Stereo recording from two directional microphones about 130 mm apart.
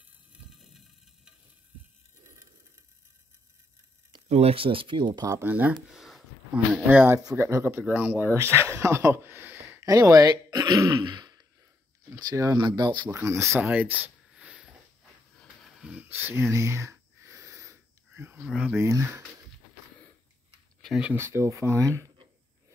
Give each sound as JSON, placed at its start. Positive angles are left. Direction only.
{"t": 0.5, "sound": "a sound", "side_deg": 0}
{"t": 4.3, "sound": "speech", "side_deg": -50}
{"t": 5.4, "sound": "speech", "side_deg": -15}
{"t": 9.8, "sound": "speech", "side_deg": -25}
{"t": 13.1, "sound": "speech", "side_deg": -20}
{"t": 13.6, "sound": "a sound", "side_deg": -10}
{"t": 15.3, "sound": "wheeze", "side_deg": 0}
{"t": 15.9, "sound": "a sound", "side_deg": -15}
{"t": 18.5, "sound": "speech", "side_deg": 0}
{"t": 18.8, "sound": "speech", "side_deg": -20}
{"t": 20.8, "sound": "speech", "side_deg": 0}
{"t": 21.1, "sound": "speech", "side_deg": -20}